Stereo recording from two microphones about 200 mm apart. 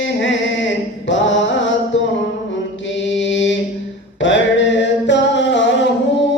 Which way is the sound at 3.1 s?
65° left (ahead or behind).